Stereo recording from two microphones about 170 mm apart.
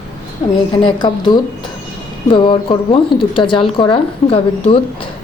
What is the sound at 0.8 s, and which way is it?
A woman's voice, 25° left (ahead or behind).